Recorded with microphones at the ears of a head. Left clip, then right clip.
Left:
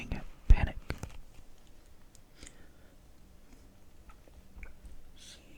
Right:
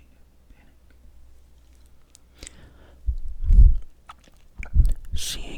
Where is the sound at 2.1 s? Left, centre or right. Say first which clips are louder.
Right 9 dB; right.